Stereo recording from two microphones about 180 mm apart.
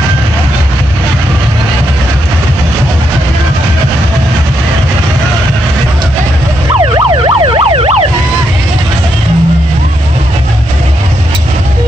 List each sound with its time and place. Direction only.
6.8 s emergency vehicle: 25° right (ahead or behind)